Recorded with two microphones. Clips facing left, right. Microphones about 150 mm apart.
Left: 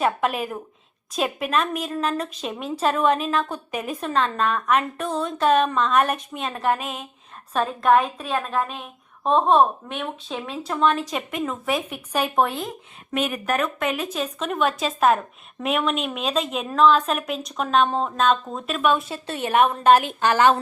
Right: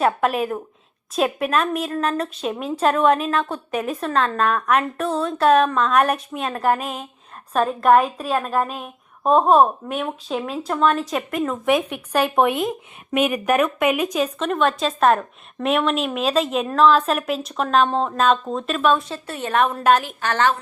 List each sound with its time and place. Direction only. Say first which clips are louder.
0.0 s a woman's voice: right 3 dB; centre (ahead or behind)
6.7 s speech: right 3 dB; 40° right (ahead or behind)
7.5 s a woman's voice: right 3 dB; 5° right (ahead or behind)
13.1 s speech: right 5 dB; 15° right (ahead or behind)
14.3 s a woman's voice: right 3 dB; centre (ahead or behind)
19.1 s a woman's voice: left 1 dB; 20° left (ahead or behind)
19.6 s a woman's voice: left 1 dB; centre (ahead or behind)
20.0 s a woman's voice: left 4 dB; 20° left (ahead or behind)